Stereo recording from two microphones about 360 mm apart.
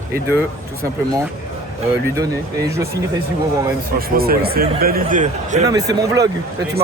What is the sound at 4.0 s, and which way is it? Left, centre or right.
Speech, right.